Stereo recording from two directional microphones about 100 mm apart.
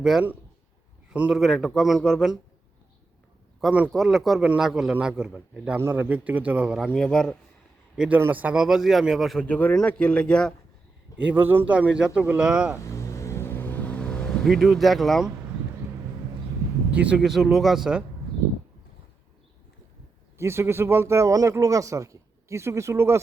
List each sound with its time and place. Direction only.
0.0 s a man's voice: 5° right (ahead or behind)
1.3 s a man's voice: centre (ahead or behind)
3.9 s a man's voice: centre (ahead or behind)
6.7 s a man's voice: centre (ahead or behind)
7.9 s a man's voice: 10° right (ahead or behind)
9.4 s speech: 15° left (ahead or behind)
11.2 s a man's voice: 15° right (ahead or behind)
12.8 s vehicle: 30° left (ahead or behind); by 15.3 s centre (ahead or behind)
16.9 s a man's voice: 10° right (ahead or behind)
20.4 s speech: 25° right (ahead or behind)